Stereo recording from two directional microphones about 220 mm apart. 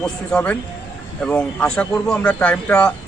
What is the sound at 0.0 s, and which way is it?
A man's voice, 5° left (ahead or behind).